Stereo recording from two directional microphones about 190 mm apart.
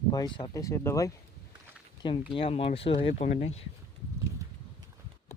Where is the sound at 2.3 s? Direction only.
30° left (ahead or behind).